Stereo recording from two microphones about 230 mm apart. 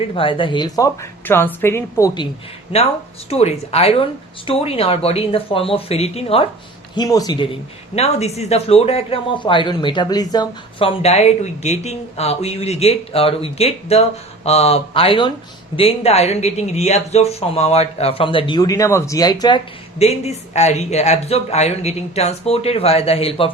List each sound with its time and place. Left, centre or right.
0.0 s speech: left
3.2 s speech: left
7.9 s speech: left